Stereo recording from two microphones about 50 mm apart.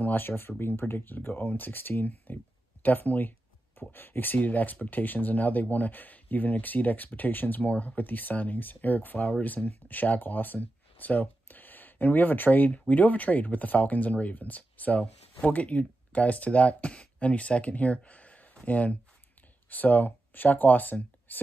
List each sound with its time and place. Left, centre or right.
0.0 s speech: left
2.8 s a sound: left
3.9 s speech: left